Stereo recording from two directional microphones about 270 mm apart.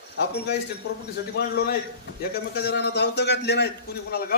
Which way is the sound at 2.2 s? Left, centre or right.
Left.